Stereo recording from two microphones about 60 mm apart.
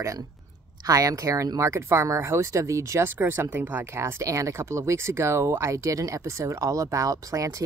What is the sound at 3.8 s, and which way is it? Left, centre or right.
Speech, right.